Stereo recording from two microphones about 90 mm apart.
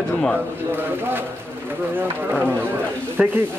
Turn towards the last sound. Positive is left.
turn(degrees=-15)  # may be behind; listen again after turning